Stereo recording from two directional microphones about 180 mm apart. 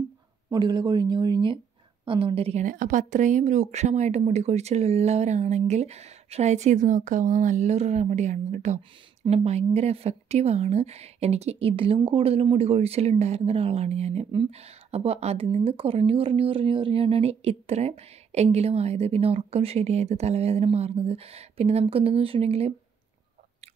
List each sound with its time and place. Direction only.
0.5 s speech: 25° right (ahead or behind)